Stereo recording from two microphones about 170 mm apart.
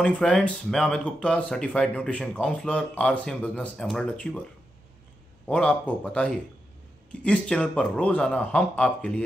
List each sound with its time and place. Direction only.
0.0 s speech: 5° left (ahead or behind)
5.5 s speech: 5° left (ahead or behind)